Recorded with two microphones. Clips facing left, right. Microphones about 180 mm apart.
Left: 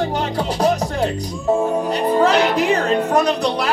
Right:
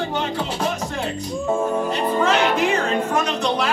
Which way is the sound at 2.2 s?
35° left (ahead or behind).